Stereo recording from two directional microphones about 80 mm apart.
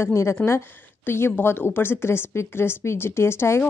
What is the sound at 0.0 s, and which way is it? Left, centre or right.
A woman's voice, left.